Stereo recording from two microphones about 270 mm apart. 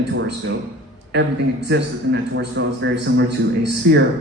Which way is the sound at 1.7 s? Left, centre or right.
Right.